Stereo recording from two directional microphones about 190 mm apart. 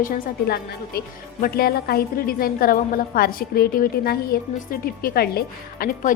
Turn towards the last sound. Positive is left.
turn(degrees=50)  # may be behind; listen again after turning